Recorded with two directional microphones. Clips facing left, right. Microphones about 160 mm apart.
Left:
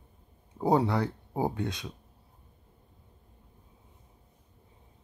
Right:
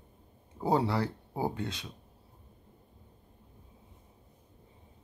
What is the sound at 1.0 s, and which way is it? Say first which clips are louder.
Speech: left 3 dB; 15° left (ahead or behind).